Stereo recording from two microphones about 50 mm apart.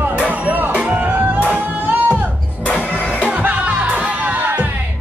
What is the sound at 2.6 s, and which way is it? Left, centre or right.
Music, left.